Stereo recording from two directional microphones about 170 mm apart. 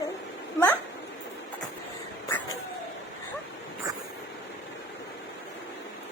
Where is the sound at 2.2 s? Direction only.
15° left (ahead or behind).